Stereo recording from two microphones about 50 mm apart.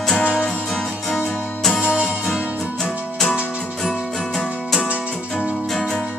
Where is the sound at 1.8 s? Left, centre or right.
Centre.